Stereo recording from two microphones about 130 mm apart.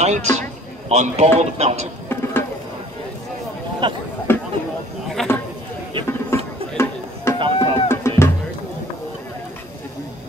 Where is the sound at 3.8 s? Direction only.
35° right (ahead or behind).